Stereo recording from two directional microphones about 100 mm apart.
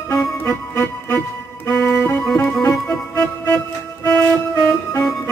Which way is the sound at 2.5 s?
5° left (ahead or behind).